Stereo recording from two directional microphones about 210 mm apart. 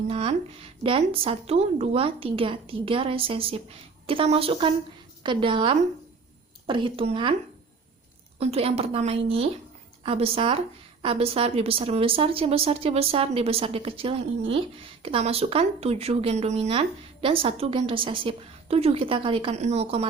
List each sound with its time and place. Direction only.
0.1 s speech: 30° right (ahead or behind)
8.4 s speech: 30° right (ahead or behind)